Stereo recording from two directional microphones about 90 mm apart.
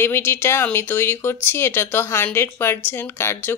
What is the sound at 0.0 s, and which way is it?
Speech, 25° left (ahead or behind).